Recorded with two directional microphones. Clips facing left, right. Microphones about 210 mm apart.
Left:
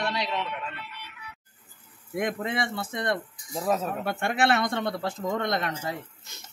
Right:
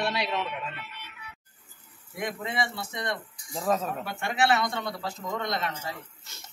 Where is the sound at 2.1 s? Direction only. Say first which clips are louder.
Left 4 dB; 50° left (ahead or behind).